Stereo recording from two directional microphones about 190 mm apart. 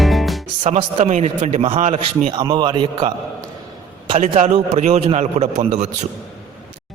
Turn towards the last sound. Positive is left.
turn(degrees=-35)  # may be behind; listen again after turning